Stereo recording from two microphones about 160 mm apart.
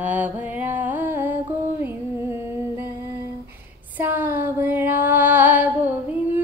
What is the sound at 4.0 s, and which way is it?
Music, 10° right (ahead or behind).